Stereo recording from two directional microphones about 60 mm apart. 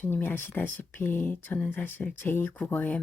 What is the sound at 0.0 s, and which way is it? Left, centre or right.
Speech, left.